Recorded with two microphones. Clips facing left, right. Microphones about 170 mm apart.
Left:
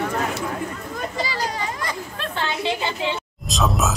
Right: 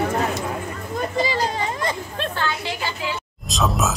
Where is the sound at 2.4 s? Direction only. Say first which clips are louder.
Left 6 dB; 20° left (ahead or behind).